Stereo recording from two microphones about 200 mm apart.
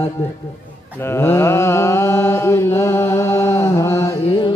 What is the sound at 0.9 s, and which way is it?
Mantra, 10° left (ahead or behind).